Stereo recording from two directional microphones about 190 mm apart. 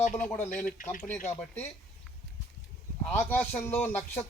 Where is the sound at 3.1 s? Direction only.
10° left (ahead or behind).